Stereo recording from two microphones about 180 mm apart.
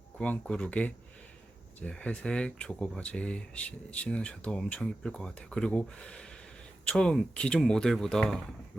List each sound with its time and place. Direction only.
0.2 s speech: 5° left (ahead or behind)